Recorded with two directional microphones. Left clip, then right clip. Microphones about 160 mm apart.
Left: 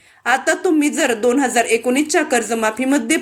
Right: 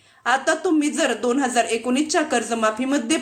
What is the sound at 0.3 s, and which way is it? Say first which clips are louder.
A woman's voice: left 3 dB; 20° left (ahead or behind).